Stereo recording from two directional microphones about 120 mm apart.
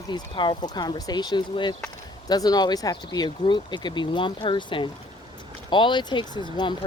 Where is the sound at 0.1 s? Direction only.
40° left (ahead or behind).